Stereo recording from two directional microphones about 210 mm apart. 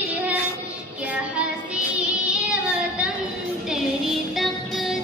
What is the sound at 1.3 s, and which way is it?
Music, 5° right (ahead or behind).